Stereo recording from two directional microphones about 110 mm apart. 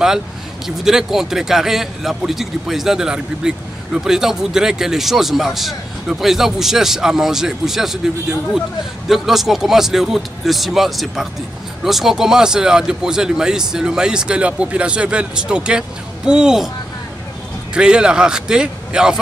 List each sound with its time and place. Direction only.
0.7 s a man's voice: 5° right (ahead or behind)
17.7 s a man's voice: 10° right (ahead or behind)